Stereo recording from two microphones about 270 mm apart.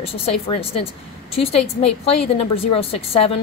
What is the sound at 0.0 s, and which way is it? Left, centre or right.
A woman's voice, left.